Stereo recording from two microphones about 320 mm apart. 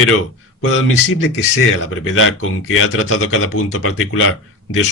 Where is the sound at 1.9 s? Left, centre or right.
Left.